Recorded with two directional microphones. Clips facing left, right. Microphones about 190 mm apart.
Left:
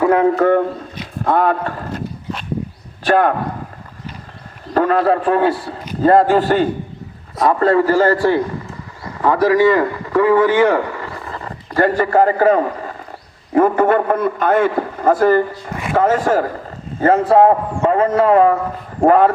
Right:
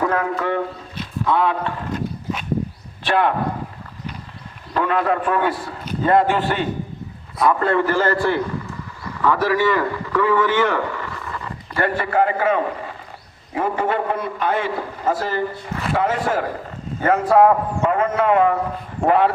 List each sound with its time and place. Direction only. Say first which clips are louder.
0.0 s speech: left 7 dB; 20° left (ahead or behind)
0.3 s a man's voice: left 9 dB; 45° left (ahead or behind)
3.0 s a man's voice: left 5 dB; 45° left (ahead or behind)
4.7 s a man's voice: left 5 dB; 40° left (ahead or behind)
13.5 s a man's voice: left 8 dB; 50° left (ahead or behind)
17.0 s a man's voice: left 3 dB; 30° left (ahead or behind)